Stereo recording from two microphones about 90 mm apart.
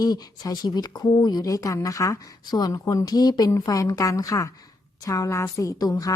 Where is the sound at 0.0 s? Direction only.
45° left (ahead or behind).